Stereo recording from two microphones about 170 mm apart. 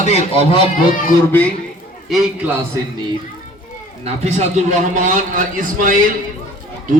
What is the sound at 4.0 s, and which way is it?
A man's voice, 40° right (ahead or behind).